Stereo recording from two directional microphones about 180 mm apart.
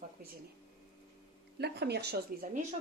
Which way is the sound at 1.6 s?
65° right (ahead or behind).